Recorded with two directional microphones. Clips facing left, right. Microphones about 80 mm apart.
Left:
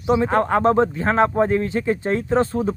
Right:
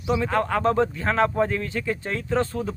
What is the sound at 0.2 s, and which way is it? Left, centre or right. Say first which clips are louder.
Speech: left 5 dB; left.